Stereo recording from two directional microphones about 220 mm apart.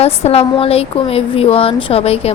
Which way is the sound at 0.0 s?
30° left (ahead or behind).